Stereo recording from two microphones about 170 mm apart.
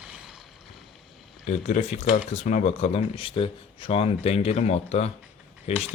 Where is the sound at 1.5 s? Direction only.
45° left (ahead or behind).